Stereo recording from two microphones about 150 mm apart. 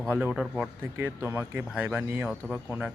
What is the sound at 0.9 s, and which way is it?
Speech, 15° right (ahead or behind).